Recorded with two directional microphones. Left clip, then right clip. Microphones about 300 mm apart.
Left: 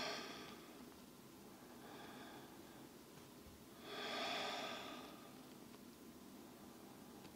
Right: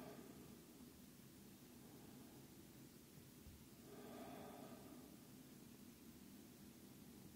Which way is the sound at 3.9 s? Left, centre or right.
Centre.